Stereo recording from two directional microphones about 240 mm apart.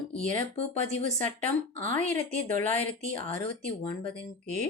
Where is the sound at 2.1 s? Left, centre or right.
Right.